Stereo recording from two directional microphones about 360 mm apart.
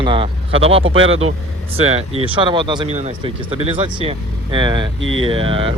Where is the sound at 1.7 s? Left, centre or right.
Centre.